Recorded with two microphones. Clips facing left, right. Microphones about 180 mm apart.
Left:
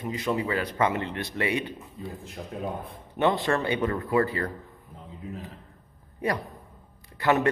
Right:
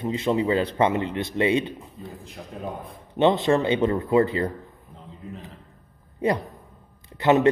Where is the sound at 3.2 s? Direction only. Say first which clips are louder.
Right 5 dB; 20° right (ahead or behind).